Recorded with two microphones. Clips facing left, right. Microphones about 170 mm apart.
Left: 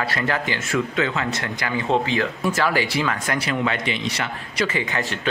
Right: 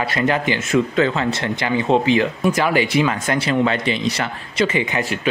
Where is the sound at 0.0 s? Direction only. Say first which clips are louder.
Right 5 dB; 20° right (ahead or behind).